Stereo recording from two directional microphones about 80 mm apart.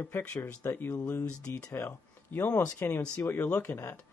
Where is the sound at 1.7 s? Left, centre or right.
Left.